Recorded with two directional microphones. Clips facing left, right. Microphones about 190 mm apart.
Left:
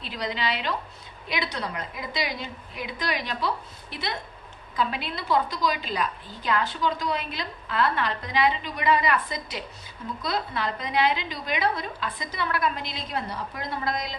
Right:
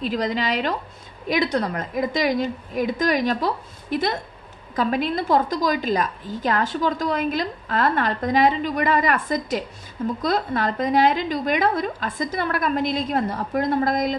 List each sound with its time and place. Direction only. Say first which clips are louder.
0.0 s a woman's voice: right 7 dB; 45° right (ahead or behind)